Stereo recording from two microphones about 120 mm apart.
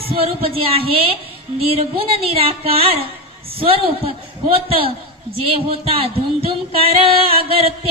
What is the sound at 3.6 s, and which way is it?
Speech, 50° right (ahead or behind).